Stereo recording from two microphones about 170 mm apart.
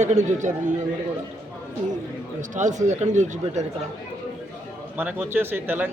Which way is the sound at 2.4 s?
45° right (ahead or behind).